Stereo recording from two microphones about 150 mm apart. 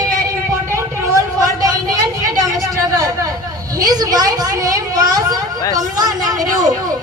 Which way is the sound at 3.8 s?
25° right (ahead or behind).